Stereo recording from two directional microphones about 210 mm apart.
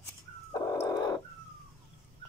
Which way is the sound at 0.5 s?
20° left (ahead or behind).